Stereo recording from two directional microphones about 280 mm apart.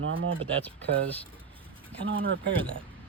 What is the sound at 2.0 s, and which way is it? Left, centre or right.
Speech, right.